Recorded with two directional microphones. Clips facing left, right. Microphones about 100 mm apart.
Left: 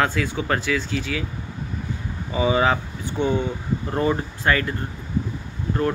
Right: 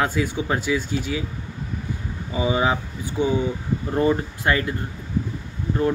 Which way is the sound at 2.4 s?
10° right (ahead or behind).